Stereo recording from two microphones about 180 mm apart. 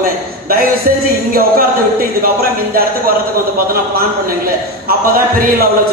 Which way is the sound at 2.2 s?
55° right (ahead or behind).